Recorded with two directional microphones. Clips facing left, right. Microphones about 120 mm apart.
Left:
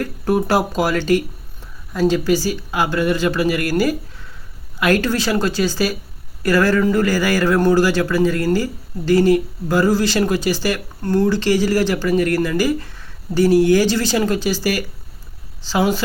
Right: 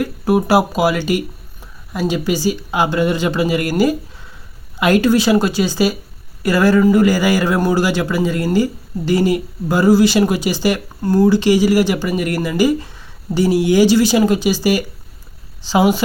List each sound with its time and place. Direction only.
0.0 s a man's voice: 10° right (ahead or behind)